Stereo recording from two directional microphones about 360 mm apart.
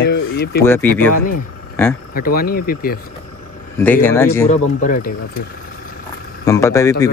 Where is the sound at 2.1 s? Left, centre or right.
Left.